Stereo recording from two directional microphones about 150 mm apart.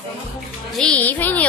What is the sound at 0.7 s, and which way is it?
Music, 5° left (ahead or behind).